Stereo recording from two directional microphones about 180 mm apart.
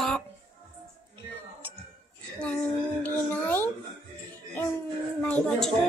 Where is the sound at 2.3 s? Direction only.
10° left (ahead or behind).